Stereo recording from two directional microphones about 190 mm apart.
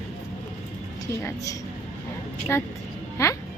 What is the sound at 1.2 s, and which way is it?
Speech, 15° left (ahead or behind).